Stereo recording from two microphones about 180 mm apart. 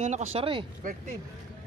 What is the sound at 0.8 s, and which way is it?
Speech, 50° right (ahead or behind).